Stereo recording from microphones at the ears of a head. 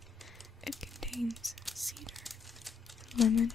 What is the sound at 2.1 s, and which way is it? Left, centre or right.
Crumpling, centre.